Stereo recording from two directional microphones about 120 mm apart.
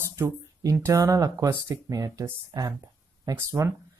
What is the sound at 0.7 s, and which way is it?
Speech, 25° right (ahead or behind).